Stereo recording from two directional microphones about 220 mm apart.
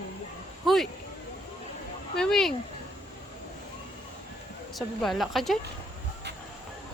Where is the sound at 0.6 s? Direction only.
Centre (ahead or behind).